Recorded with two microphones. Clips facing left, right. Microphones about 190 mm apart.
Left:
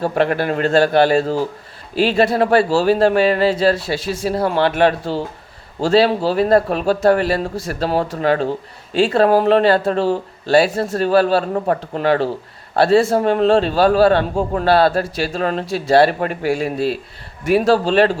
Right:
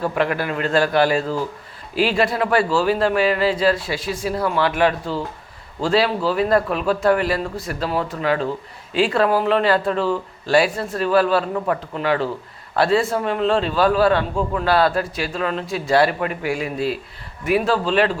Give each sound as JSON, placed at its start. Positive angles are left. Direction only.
{"t": 0.0, "sound": "a man's voice", "side_deg": 35}